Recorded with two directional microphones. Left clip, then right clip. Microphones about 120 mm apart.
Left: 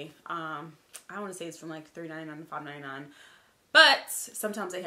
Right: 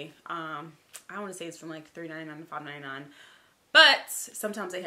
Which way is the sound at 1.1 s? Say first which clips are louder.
Even; centre (ahead or behind).